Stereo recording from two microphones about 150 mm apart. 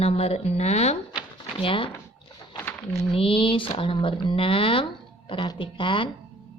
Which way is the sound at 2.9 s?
40° left (ahead or behind).